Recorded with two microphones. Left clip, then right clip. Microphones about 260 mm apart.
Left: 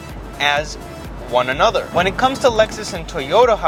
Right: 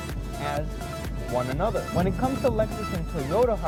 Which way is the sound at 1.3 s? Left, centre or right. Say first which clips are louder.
Left 12 dB; centre.